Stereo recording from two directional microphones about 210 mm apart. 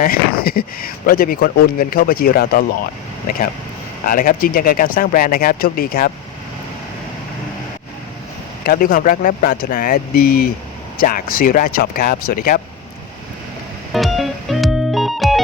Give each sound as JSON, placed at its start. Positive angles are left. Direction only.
{"t": 0.0, "sound": "speech", "side_deg": 45}
{"t": 4.0, "sound": "speech", "side_deg": 40}
{"t": 8.6, "sound": "speech", "side_deg": 45}
{"t": 13.9, "sound": "music", "side_deg": 0}